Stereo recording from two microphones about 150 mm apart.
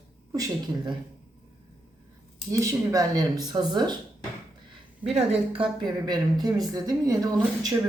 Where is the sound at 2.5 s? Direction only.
20° right (ahead or behind).